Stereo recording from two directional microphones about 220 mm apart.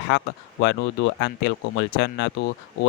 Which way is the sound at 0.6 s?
55° left (ahead or behind).